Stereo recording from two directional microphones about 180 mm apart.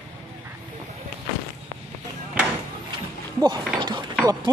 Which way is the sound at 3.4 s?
25° right (ahead or behind).